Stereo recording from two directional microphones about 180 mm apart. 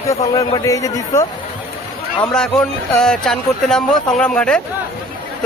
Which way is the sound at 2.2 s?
5° left (ahead or behind).